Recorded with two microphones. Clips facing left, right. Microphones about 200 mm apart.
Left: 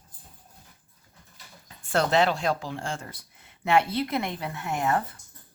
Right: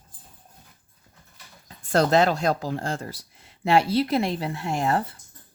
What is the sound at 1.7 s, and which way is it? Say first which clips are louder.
Speech: right 4 dB; 40° right (ahead or behind).